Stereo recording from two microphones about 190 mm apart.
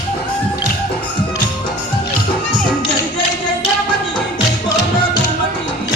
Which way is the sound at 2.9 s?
25° left (ahead or behind).